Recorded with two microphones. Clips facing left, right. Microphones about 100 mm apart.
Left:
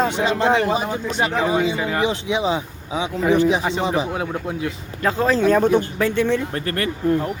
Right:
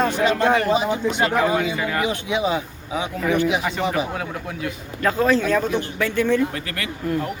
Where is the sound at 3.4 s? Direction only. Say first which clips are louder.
Left 3 dB; 35° left (ahead or behind).